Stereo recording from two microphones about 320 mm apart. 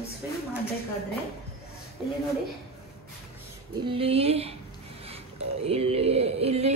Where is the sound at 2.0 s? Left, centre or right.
Centre.